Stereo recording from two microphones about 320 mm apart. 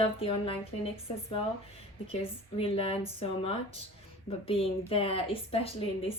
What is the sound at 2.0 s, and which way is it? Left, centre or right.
A woman's voice, centre.